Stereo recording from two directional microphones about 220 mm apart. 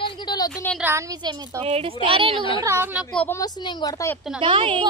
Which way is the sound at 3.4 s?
20° left (ahead or behind).